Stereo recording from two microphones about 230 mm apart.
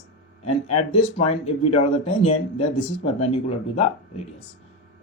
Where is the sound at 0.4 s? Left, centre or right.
Left.